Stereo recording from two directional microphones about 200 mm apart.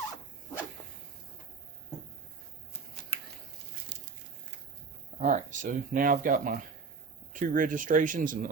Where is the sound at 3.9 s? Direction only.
60° right (ahead or behind).